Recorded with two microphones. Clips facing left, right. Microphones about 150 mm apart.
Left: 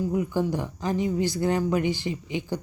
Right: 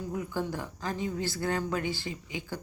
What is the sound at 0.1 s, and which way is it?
Speech, 15° left (ahead or behind).